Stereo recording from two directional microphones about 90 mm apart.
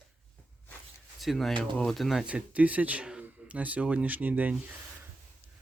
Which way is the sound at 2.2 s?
15° right (ahead or behind).